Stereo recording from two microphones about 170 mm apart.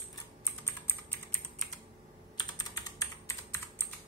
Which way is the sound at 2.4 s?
20° left (ahead or behind).